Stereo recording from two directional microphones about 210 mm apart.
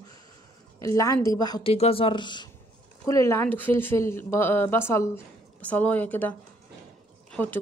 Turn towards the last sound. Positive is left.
turn(degrees=10)  # may be behind; listen again after turning